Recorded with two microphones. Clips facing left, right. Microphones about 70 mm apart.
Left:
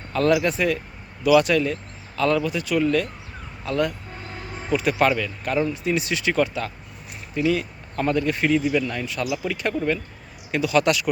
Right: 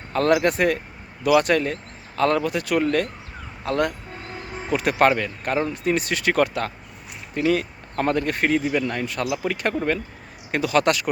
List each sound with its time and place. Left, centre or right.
0.1 s speech: right
5.7 s speech: right
7.3 s speech: right
9.2 s speech: right
9.5 s speech: right